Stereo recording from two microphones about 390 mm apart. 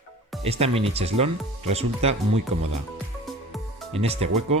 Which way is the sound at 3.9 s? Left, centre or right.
Centre.